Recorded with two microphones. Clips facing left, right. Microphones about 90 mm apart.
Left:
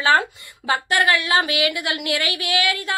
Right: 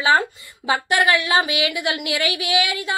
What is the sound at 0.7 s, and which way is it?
A woman's voice, 20° right (ahead or behind).